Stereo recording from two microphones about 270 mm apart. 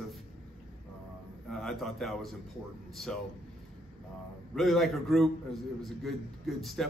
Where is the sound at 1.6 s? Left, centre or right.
Centre.